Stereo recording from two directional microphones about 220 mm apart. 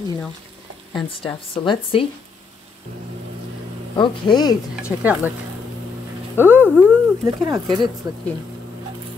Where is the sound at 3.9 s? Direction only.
20° left (ahead or behind).